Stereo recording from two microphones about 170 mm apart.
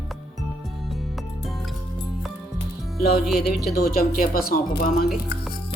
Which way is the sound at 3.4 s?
65° left (ahead or behind).